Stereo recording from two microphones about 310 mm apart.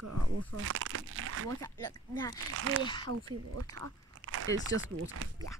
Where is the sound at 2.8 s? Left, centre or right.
Centre.